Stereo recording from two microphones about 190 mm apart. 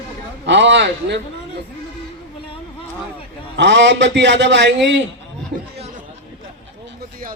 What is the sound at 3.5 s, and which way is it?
A man's voice, 65° right (ahead or behind).